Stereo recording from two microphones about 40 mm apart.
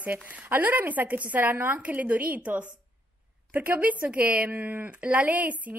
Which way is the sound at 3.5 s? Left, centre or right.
Right.